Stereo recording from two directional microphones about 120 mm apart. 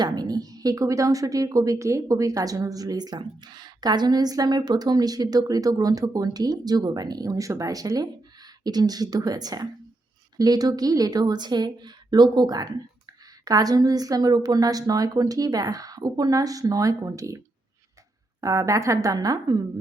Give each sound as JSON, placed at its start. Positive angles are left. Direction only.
{"t": 0.0, "sound": "a woman's voice", "side_deg": -35}